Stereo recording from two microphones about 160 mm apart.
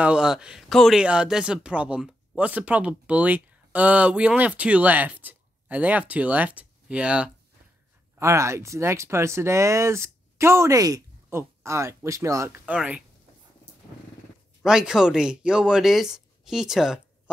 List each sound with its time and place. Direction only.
0.0 s speech: 5° right (ahead or behind)
8.2 s speech: 20° right (ahead or behind)
14.6 s speech: 5° right (ahead or behind)